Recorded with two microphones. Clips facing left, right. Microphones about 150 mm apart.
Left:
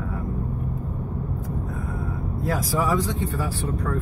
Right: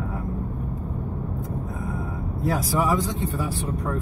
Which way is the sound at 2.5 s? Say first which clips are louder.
Even; 20° right (ahead or behind).